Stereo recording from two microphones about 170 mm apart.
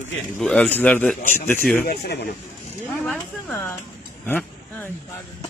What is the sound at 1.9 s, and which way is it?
Speech, 75° left (ahead or behind).